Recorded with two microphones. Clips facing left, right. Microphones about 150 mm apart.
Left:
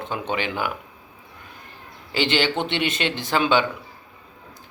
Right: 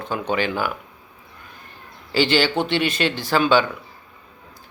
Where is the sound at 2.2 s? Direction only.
20° left (ahead or behind).